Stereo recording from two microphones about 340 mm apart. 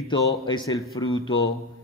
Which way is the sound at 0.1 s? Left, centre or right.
Centre.